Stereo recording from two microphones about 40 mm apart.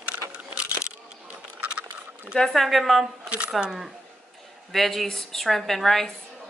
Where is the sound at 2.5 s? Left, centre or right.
Centre.